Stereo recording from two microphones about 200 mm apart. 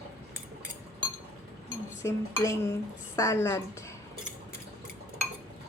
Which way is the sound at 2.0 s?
15° left (ahead or behind).